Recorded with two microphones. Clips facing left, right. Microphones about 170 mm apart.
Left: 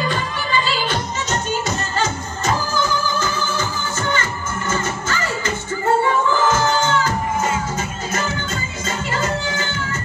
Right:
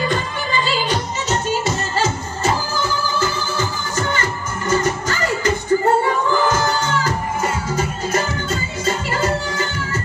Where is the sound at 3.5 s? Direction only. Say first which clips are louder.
Right 2 dB; 35° right (ahead or behind).